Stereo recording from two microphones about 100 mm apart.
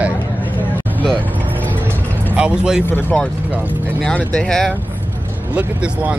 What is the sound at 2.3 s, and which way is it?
Speech, 10° right (ahead or behind).